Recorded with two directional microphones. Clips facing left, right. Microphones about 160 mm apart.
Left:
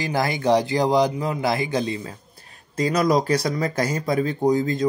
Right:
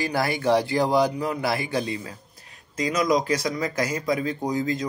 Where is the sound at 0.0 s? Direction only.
20° left (ahead or behind).